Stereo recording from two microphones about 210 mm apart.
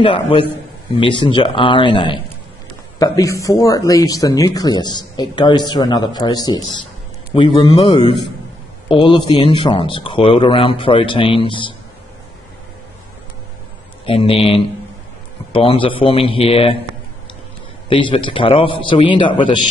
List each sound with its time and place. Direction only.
0.0 s a man's voice: 25° left (ahead or behind)
14.0 s a man's voice: 25° left (ahead or behind)
17.8 s a man's voice: 25° left (ahead or behind)